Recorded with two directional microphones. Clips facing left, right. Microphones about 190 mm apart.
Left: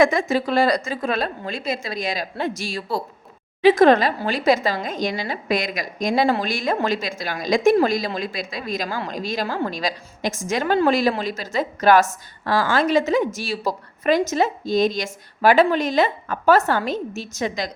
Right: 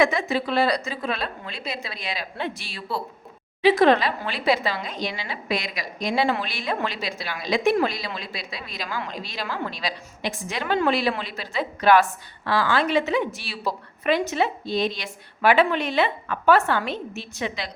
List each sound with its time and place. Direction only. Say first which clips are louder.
0.0 s a woman's voice: left 4 dB; 45° left (ahead or behind)